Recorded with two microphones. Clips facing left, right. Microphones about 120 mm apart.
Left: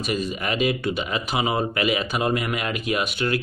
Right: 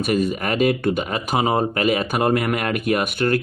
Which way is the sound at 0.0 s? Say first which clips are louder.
Right 5 dB; 55° right (ahead or behind).